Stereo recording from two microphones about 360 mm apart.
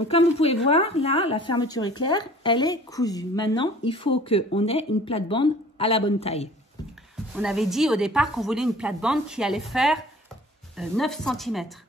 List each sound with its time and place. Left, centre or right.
0.1 s speech: centre
7.3 s speech: centre